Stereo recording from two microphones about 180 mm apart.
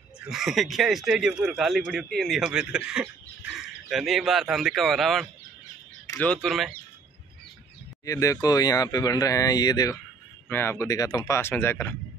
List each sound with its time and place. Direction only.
0.2 s speech: centre (ahead or behind)
8.0 s speech: 20° left (ahead or behind)